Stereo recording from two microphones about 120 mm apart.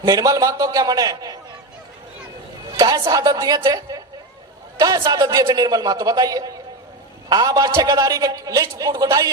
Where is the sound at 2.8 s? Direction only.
30° right (ahead or behind).